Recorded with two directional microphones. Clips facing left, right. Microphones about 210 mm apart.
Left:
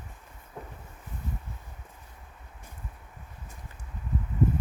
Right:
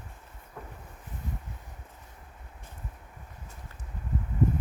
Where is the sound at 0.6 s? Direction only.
25° left (ahead or behind).